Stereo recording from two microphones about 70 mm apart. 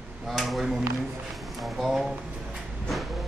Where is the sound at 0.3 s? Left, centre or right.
Centre.